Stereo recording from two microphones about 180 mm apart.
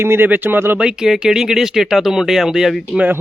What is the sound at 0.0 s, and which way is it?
Speech, 10° right (ahead or behind).